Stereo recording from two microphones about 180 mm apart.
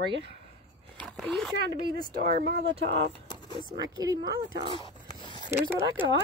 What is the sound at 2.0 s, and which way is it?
Speech, 55° right (ahead or behind).